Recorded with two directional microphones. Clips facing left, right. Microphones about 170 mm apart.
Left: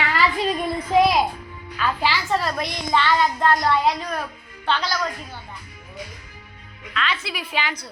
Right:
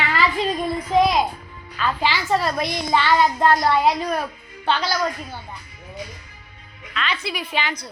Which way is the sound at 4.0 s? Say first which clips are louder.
Right 4 dB; 30° right (ahead or behind).